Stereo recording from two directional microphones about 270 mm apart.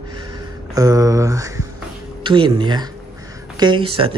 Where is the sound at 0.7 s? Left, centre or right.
Centre.